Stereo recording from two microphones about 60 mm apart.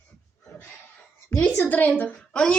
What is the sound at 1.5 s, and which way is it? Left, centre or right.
Speech, left.